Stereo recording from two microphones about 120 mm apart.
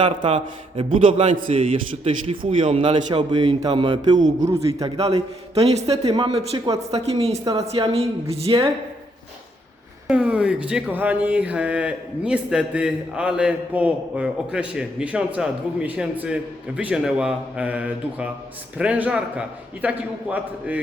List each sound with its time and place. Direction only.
0.0 s speech: 45° right (ahead or behind); by 1.6 s 60° right (ahead or behind)
1.7 s speech: 50° right (ahead or behind)
5.5 s a woman's voice: 60° right (ahead or behind)
6.1 s a woman's voice: 50° right (ahead or behind)
10.1 s speech: 10° right (ahead or behind)